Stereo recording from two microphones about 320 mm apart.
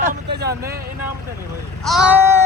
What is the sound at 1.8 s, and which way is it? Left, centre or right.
Speech, centre.